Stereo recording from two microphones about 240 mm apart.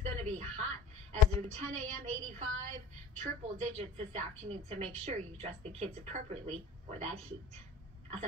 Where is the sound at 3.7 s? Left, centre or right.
Right.